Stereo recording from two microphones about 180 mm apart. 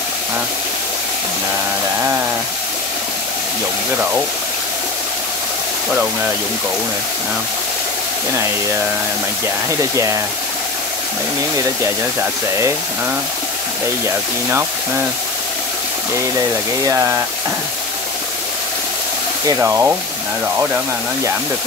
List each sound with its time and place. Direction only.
11.5 s speech: 15° right (ahead or behind)
16.8 s speech: 15° right (ahead or behind)
19.4 s speech: 15° right (ahead or behind)